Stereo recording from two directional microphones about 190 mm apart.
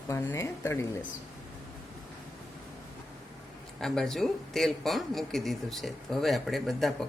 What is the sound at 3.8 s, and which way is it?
Speech, centre (ahead or behind).